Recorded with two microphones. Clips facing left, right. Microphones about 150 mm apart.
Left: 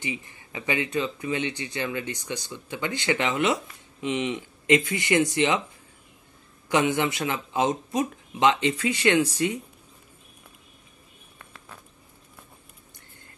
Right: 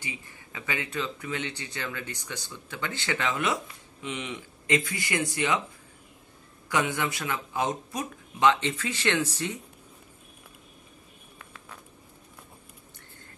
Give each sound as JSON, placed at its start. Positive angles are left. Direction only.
{"t": 0.0, "sound": "speech", "side_deg": 20}
{"t": 6.7, "sound": "speech", "side_deg": 20}